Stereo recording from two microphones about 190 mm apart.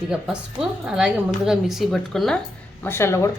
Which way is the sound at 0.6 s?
5° right (ahead or behind).